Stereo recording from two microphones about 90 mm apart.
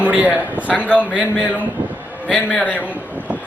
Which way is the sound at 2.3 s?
15° left (ahead or behind).